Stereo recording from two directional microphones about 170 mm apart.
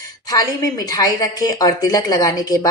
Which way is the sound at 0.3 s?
20° left (ahead or behind).